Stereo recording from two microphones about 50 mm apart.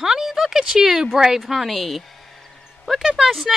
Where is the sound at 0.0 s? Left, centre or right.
Centre.